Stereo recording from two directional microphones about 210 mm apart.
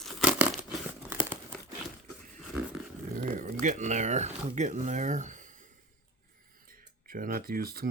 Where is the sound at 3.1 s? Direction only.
40° right (ahead or behind).